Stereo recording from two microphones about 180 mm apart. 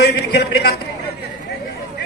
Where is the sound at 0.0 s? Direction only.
65° left (ahead or behind).